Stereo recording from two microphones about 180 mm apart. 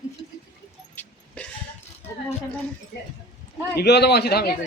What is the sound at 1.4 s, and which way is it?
Burping, 5° left (ahead or behind).